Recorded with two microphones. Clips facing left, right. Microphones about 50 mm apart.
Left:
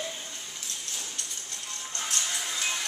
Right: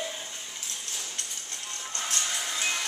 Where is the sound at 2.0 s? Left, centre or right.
Centre.